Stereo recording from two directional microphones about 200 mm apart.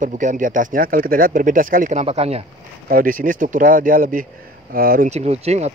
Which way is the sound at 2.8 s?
45° right (ahead or behind).